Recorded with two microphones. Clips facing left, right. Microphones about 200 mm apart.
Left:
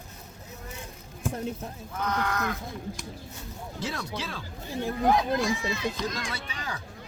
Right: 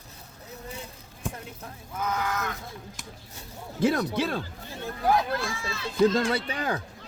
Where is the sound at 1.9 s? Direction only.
5° right (ahead or behind).